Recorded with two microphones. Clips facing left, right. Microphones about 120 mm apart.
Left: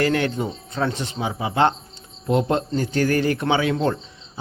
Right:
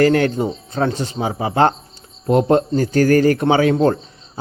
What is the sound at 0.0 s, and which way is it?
A man's voice, 40° right (ahead or behind).